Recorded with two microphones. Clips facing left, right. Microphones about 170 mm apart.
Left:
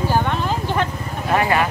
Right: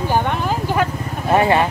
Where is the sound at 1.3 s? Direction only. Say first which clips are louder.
Right 3 dB; 25° right (ahead or behind).